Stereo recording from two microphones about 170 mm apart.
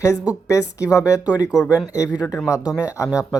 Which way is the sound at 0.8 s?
20° left (ahead or behind).